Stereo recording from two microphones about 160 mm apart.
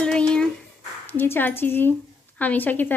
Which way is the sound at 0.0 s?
5° left (ahead or behind).